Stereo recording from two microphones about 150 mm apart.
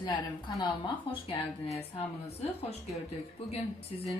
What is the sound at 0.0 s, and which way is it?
A woman's voice, 30° left (ahead or behind).